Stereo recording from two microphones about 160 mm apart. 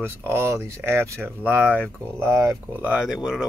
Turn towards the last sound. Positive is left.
turn(degrees=-5)  # may be behind; listen again after turning